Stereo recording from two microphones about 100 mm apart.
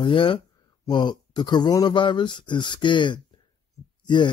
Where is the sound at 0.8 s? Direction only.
50° left (ahead or behind).